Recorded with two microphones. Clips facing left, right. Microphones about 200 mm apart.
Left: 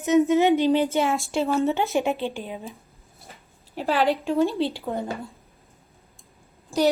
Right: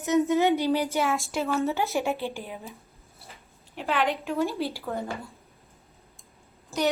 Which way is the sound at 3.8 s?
35° left (ahead or behind).